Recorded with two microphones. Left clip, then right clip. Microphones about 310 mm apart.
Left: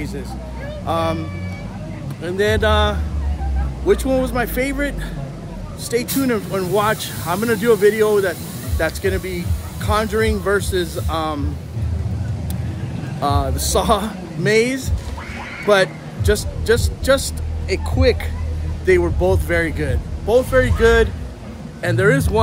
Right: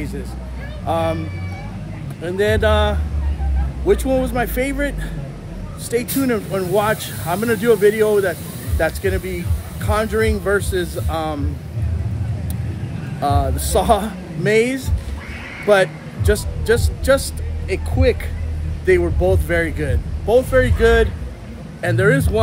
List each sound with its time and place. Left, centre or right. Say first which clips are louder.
0.8 s speech: right 1 dB; centre
2.2 s speech: even; centre
13.2 s a man's voice: right 1 dB; centre